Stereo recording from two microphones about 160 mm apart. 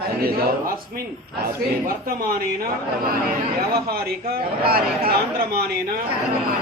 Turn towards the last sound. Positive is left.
turn(degrees=-70)  # may be behind; listen again after turning